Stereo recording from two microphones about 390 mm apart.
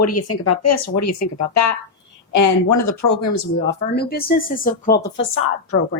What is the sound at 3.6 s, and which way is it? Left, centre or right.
Speech, left.